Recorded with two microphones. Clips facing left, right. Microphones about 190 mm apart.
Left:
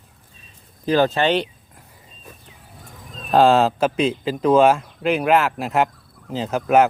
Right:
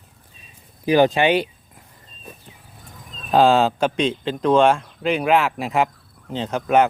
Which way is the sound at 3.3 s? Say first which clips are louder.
Left 1 dB; centre (ahead or behind).